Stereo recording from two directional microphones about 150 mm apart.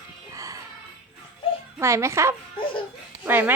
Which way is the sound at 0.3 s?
20° right (ahead or behind).